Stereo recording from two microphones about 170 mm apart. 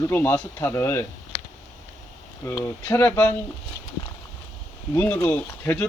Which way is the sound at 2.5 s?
15° left (ahead or behind).